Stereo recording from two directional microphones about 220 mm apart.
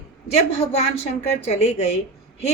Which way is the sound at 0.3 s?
25° left (ahead or behind).